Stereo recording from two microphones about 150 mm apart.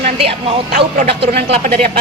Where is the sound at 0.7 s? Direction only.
80° right.